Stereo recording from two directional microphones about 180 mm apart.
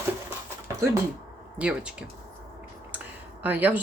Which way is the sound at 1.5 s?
5° right (ahead or behind).